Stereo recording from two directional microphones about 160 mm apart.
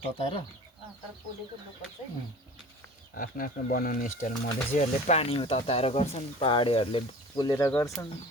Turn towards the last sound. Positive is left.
turn(degrees=15)  # may be behind; listen again after turning